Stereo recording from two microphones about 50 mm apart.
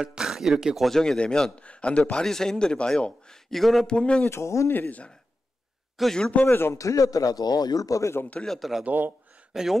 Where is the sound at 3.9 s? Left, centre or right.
Centre.